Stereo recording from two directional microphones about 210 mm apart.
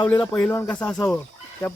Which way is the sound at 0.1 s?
10° left (ahead or behind).